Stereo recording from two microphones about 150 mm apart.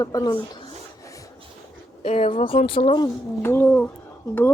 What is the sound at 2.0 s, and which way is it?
Speech, 40° left (ahead or behind).